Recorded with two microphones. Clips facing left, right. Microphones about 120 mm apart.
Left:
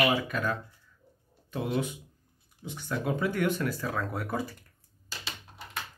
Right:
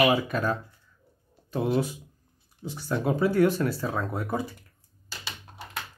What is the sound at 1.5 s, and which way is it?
Speech, 35° right (ahead or behind).